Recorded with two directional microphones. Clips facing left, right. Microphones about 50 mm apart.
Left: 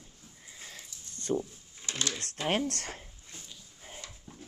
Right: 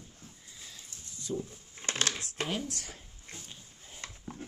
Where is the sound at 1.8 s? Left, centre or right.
Right.